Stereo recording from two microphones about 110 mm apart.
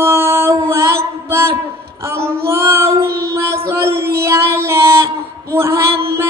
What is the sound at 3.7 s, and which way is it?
Music, 25° right (ahead or behind).